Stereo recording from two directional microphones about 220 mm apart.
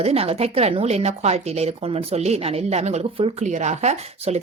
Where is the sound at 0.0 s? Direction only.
25° right (ahead or behind).